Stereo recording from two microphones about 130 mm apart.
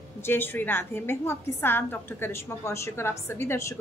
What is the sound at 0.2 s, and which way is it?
A woman's voice, 15° left (ahead or behind).